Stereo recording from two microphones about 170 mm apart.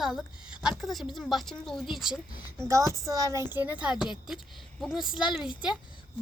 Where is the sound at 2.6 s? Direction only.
15° right (ahead or behind).